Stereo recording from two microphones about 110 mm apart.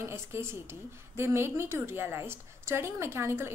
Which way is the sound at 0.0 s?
25° right (ahead or behind).